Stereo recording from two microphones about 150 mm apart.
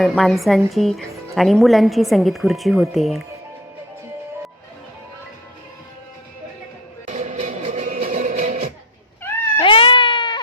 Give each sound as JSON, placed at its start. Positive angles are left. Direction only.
{"t": 0.0, "sound": "a woman's voice", "side_deg": 0}
{"t": 7.1, "sound": "music", "side_deg": -50}
{"t": 9.6, "sound": "cat", "side_deg": 35}